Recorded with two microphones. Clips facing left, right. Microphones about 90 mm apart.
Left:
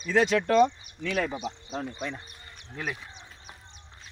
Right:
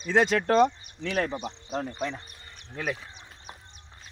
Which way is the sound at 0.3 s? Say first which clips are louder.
Even; 45° right (ahead or behind).